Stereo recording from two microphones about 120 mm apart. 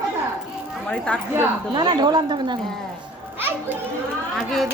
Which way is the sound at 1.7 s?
35° right (ahead or behind).